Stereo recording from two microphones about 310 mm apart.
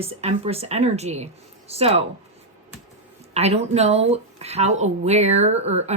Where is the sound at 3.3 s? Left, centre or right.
Centre.